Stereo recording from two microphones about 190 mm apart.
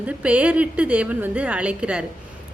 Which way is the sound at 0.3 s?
5° right (ahead or behind).